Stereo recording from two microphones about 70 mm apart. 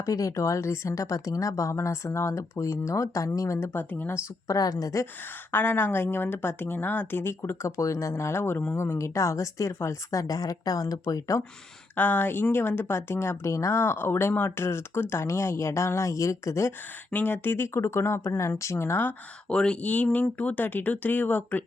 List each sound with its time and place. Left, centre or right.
0.0 s a woman's voice: left
4.4 s a woman's voice: left
5.5 s a woman's voice: left
11.9 s a woman's voice: left
17.1 s a woman's voice: left
19.5 s speech: centre